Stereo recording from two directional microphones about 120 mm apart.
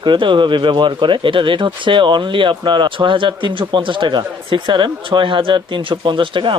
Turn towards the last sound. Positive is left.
turn(degrees=-45)  # may be behind; listen again after turning